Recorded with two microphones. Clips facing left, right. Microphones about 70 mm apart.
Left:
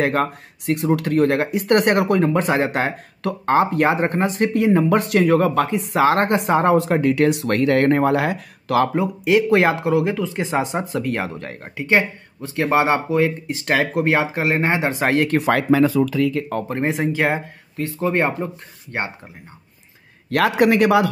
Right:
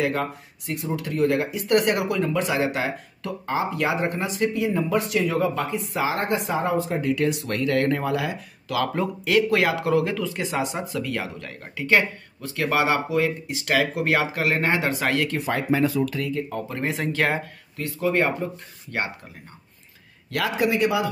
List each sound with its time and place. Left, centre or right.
0.0 s speech: left
3.3 s speech: left
9.2 s speech: left
15.2 s speech: left
16.3 s speech: left
16.6 s speech: left
17.8 s speech: left
20.2 s a man's voice: left
20.5 s speech: left